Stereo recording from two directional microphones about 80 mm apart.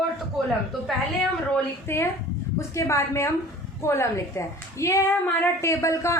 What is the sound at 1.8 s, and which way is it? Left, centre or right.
A woman's voice, left.